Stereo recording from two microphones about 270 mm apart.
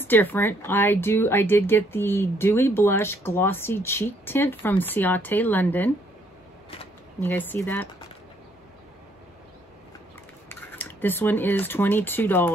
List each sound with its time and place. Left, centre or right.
0.0 s speech: centre
7.2 s speech: centre
10.5 s speech: centre